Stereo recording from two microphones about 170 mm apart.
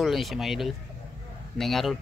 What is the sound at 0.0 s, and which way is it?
Speech, centre (ahead or behind).